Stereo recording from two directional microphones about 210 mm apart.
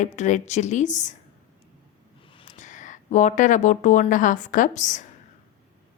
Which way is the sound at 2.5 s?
35° left (ahead or behind).